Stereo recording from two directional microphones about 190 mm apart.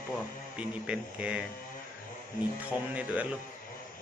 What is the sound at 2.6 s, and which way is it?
Speech, 10° right (ahead or behind).